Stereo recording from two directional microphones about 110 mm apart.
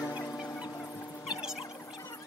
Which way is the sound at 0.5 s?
40° left (ahead or behind).